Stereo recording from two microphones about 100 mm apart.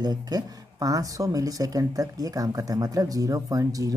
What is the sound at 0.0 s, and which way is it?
Speech, 40° right (ahead or behind).